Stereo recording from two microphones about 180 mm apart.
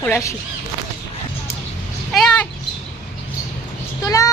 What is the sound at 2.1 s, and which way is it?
Speech, 5° left (ahead or behind).